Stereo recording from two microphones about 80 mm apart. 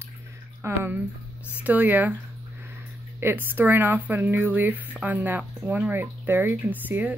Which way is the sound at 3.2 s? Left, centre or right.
Right.